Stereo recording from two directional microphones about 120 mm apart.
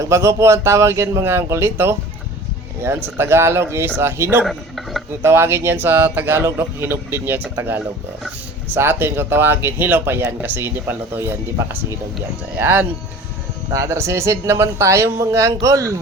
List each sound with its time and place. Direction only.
0.0 s a man's voice: 25° right (ahead or behind)